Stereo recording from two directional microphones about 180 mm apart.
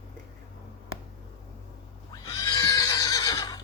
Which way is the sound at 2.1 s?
20° left (ahead or behind).